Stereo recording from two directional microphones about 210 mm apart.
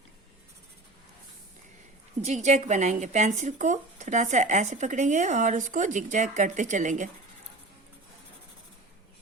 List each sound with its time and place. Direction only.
2.2 s speech: 35° right (ahead or behind)